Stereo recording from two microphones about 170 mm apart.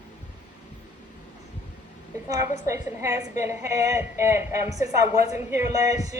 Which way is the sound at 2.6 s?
20° right (ahead or behind).